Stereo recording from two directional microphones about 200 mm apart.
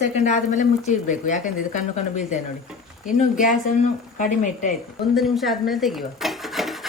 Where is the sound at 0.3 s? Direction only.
40° left (ahead or behind).